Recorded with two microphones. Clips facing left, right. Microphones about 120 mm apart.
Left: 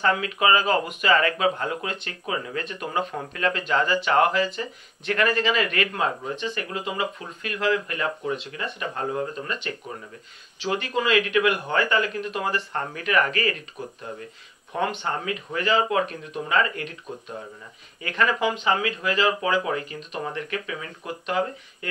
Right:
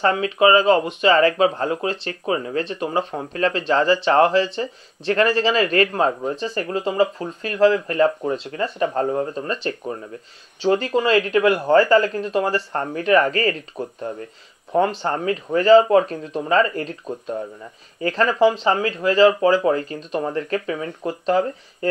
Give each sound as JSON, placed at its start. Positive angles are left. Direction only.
{"t": 0.0, "sound": "speech", "side_deg": -30}
{"t": 18.0, "sound": "speech", "side_deg": -35}